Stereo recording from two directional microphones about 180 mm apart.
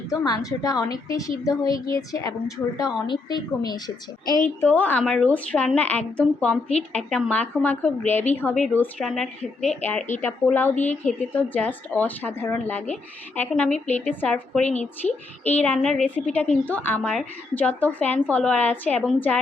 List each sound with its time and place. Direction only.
0.1 s a woman's voice: 20° left (ahead or behind)
4.6 s a woman's voice: 10° left (ahead or behind)
14.6 s a woman's voice: 40° left (ahead or behind)
15.0 s speech: 10° left (ahead or behind)